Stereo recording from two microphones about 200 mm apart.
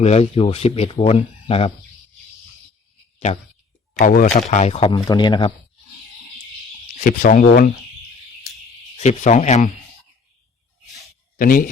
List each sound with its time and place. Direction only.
0.0 s speech: 30° left (ahead or behind)
3.9 s speech: 40° left (ahead or behind); by 5.5 s 20° left (ahead or behind)
7.0 s speech: 40° left (ahead or behind)
9.0 s a man's voice: 35° left (ahead or behind)
11.3 s speech: 45° left (ahead or behind)